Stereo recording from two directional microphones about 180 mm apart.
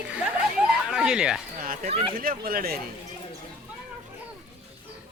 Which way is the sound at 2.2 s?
55° right (ahead or behind).